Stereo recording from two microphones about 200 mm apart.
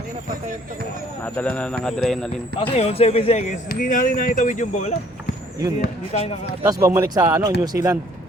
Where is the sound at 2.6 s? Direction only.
30° left (ahead or behind).